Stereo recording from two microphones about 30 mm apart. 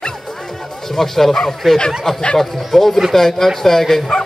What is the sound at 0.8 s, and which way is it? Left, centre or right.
Speech, centre.